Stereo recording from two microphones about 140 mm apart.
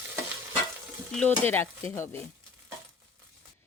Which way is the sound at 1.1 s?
15° left (ahead or behind).